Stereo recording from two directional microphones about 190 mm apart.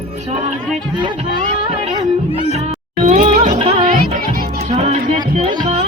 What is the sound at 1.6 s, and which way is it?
Music, 25° right (ahead or behind).